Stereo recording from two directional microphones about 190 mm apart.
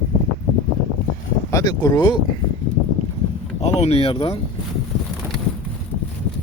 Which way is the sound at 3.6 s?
35° left (ahead or behind).